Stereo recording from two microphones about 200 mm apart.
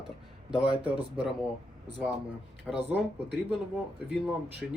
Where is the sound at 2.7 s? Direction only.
Centre (ahead or behind).